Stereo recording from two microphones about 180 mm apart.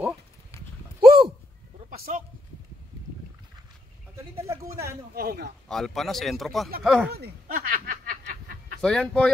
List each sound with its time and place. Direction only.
1.9 s a sound: 50° right (ahead or behind)
4.1 s speech: 15° right (ahead or behind)
5.1 s a man's voice: 60° right (ahead or behind)
5.7 s a man's voice: centre (ahead or behind)
7.1 s snicker: 55° right (ahead or behind)
8.8 s a man's voice: 5° left (ahead or behind)